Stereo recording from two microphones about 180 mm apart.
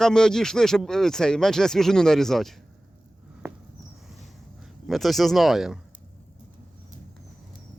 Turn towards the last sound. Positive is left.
turn(degrees=0)  # may be behind; listen again after turning